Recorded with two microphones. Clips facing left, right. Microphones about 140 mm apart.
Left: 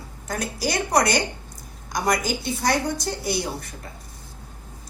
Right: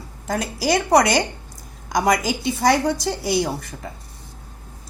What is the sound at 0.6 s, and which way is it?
A woman's voice, 90° right.